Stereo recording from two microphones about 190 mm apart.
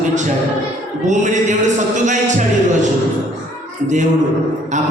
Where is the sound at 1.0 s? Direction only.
40° right (ahead or behind).